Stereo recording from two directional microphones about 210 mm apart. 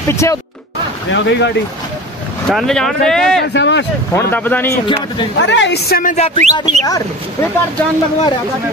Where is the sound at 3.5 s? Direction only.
55° left (ahead or behind).